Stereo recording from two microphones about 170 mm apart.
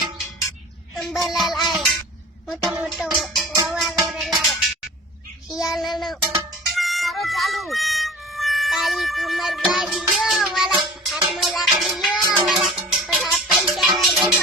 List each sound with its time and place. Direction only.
0.9 s music: centre (ahead or behind)
2.6 s music: 20° right (ahead or behind)
2.8 s music: centre (ahead or behind)
6.7 s speech: centre (ahead or behind)
11.0 s music: centre (ahead or behind)